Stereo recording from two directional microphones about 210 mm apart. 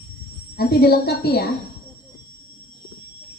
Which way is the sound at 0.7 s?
50° left (ahead or behind).